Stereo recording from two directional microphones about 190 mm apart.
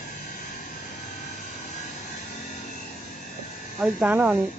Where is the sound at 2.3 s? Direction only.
40° left (ahead or behind).